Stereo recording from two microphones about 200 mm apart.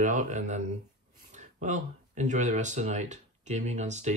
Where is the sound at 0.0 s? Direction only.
40° right (ahead or behind).